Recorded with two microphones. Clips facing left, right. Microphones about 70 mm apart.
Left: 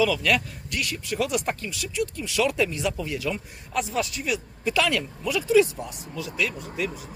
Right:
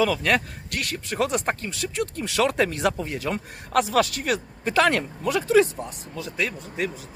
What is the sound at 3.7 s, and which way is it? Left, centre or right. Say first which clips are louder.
A man's voice: right 6 dB; right.